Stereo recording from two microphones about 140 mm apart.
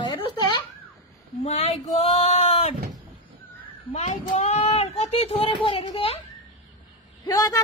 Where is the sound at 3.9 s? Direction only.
50° left (ahead or behind).